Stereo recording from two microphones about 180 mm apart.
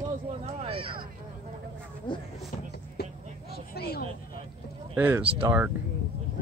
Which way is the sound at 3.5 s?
60° left (ahead or behind).